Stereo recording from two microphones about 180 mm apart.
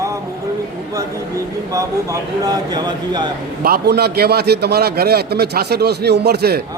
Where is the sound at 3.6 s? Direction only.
60° right (ahead or behind).